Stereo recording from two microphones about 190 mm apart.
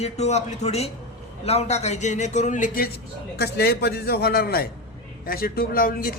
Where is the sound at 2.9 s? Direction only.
55° left (ahead or behind).